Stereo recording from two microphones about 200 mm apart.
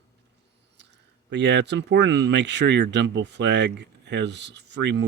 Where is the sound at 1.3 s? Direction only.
60° right (ahead or behind).